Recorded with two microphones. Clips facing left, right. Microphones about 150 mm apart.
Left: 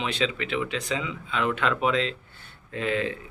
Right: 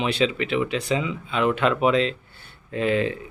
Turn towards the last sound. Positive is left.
turn(degrees=-15)  # may be behind; listen again after turning